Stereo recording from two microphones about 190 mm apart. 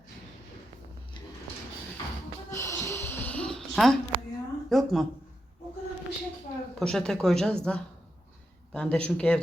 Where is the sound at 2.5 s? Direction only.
15° left (ahead or behind).